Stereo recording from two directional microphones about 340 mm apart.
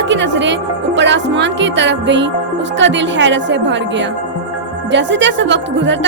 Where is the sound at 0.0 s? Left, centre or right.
Right.